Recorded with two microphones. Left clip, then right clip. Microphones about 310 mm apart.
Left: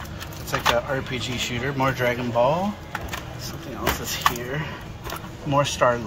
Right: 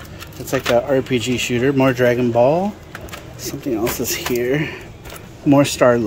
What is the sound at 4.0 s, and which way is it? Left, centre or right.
Speech, right.